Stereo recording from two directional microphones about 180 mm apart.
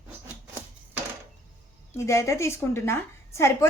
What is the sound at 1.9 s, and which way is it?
A woman's voice, 15° left (ahead or behind).